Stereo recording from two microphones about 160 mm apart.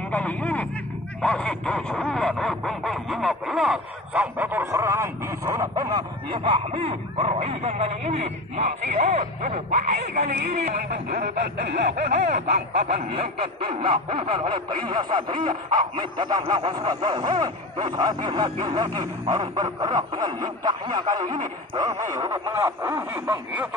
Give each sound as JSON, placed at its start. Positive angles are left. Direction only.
{"t": 0.1, "sound": "vehicle", "side_deg": 10}
{"t": 1.2, "sound": "a sound", "side_deg": 5}
{"t": 10.8, "sound": "speech", "side_deg": -75}
{"t": 12.7, "sound": "snicker", "side_deg": -40}
{"t": 13.7, "sound": "a sound", "side_deg": -35}
{"t": 22.1, "sound": "speech", "side_deg": -20}